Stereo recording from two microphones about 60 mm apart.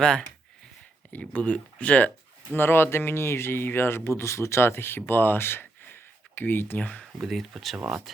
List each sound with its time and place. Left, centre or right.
0.0 s speech: centre
2.6 s speech: left
7.2 s speech: centre